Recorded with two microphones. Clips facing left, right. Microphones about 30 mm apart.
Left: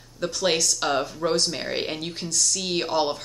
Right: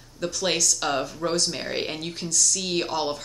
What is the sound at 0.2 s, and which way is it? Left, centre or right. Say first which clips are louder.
A woman's voice: left 2 dB; centre.